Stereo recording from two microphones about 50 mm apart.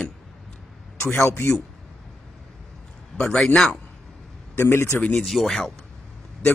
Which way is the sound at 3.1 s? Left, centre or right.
Centre.